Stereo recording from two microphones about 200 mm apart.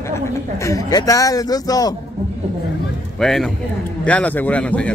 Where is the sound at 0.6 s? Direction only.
15° left (ahead or behind).